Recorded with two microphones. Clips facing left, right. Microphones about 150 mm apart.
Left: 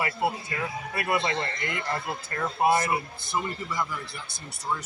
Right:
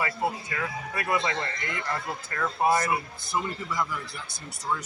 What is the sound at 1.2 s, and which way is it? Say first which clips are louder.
A man's voice: left 1 dB; 30° left (ahead or behind).